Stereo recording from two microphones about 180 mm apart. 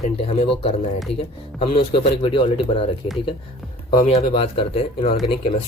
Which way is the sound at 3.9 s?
35° left (ahead or behind).